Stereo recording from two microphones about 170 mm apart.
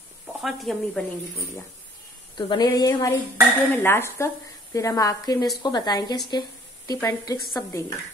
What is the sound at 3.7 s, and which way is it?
Dishes, 15° left (ahead or behind).